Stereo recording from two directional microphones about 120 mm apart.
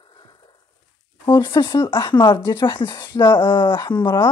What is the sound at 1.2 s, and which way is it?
A woman's voice, 40° left (ahead or behind).